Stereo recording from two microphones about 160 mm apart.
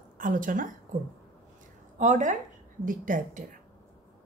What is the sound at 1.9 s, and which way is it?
A woman's voice, 50° right (ahead or behind).